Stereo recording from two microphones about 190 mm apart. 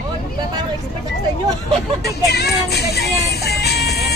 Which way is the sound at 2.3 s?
55° left (ahead or behind).